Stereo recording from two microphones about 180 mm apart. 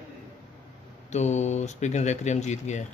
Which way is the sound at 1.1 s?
40° left (ahead or behind).